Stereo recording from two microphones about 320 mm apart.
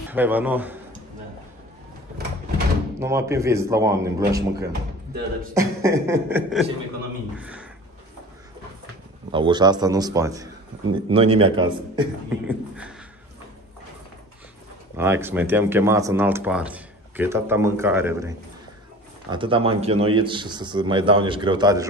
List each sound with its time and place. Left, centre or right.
0.1 s speech: centre
3.0 s a man's voice: centre
9.3 s a man's voice: centre
15.0 s a man's voice: centre
19.3 s a man's voice: centre